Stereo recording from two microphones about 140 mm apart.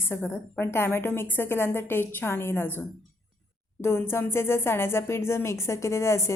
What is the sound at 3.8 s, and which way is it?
A woman's voice, 15° left (ahead or behind).